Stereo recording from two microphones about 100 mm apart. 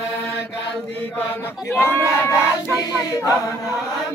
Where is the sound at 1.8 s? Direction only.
25° left (ahead or behind).